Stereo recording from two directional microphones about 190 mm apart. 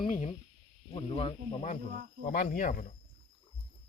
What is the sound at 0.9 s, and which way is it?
Speech, 30° left (ahead or behind).